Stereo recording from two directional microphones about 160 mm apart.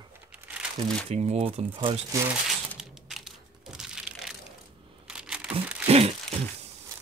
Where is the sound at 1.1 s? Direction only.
40° right (ahead or behind).